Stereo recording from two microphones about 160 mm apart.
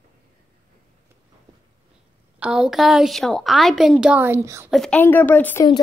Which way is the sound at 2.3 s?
5° right (ahead or behind).